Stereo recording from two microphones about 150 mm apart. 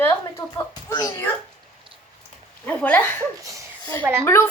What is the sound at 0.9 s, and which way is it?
Speech, 25° left (ahead or behind).